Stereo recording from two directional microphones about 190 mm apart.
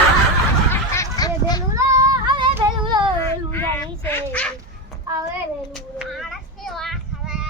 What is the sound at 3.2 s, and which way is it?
Dog, 10° left (ahead or behind).